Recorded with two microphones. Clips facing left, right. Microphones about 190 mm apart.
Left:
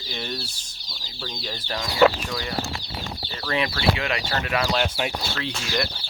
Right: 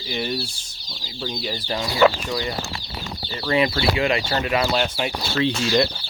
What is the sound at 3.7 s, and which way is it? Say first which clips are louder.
Speech: right 4 dB; 30° right (ahead or behind).